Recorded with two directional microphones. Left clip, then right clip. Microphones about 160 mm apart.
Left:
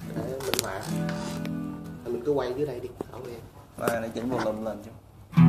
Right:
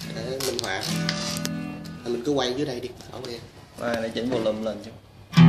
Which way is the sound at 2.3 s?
45° right (ahead or behind).